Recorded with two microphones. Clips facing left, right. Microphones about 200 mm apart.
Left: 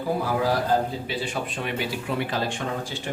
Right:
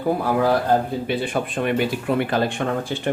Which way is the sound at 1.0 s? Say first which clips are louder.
Right 6 dB; 55° right (ahead or behind).